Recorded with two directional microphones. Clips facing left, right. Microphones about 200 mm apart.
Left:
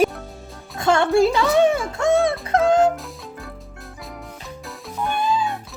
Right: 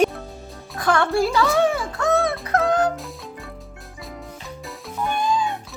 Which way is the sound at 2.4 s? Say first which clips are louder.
Left 3 dB; 25° left (ahead or behind).